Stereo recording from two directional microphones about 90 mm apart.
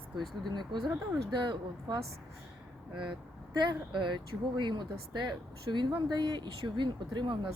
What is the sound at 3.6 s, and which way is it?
Speech, 60° right (ahead or behind).